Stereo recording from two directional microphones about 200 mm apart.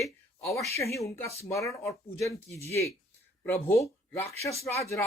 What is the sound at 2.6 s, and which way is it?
Speech, 15° left (ahead or behind).